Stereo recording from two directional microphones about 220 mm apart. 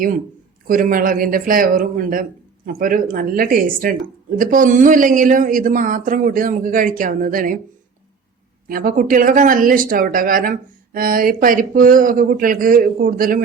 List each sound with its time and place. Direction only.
0.7 s speech: 40° right (ahead or behind)
8.6 s speech: 40° right (ahead or behind)